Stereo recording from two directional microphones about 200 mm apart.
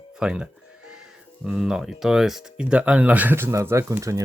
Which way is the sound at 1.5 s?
5° right (ahead or behind).